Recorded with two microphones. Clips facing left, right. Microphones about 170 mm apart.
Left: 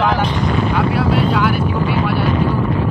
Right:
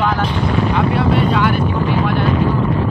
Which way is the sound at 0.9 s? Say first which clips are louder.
Right 1 dB; 5° left (ahead or behind).